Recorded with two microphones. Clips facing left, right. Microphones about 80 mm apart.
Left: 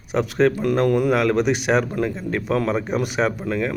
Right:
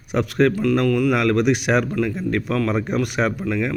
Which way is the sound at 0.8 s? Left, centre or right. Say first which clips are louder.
Even; left.